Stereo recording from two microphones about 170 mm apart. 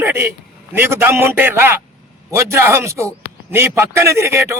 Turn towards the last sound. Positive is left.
turn(degrees=-15)  # may be behind; listen again after turning